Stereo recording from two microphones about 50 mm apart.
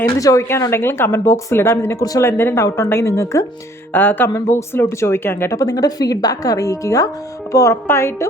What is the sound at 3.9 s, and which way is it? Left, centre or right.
Speech, left.